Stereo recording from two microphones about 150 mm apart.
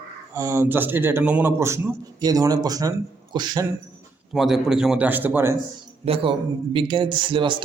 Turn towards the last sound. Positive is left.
turn(degrees=-35)  # may be behind; listen again after turning